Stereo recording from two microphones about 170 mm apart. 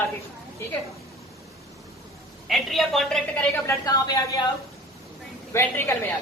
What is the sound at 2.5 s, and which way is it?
A woman's voice, centre (ahead or behind).